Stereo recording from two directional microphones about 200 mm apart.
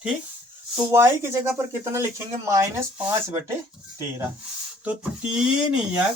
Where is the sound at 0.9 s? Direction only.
10° right (ahead or behind).